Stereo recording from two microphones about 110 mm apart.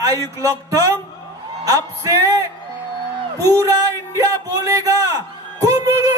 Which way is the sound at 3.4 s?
30° right (ahead or behind).